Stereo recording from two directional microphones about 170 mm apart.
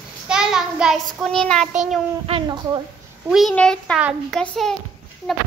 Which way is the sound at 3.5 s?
5° left (ahead or behind).